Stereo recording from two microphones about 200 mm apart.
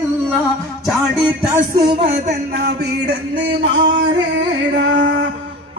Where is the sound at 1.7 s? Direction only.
20° right (ahead or behind).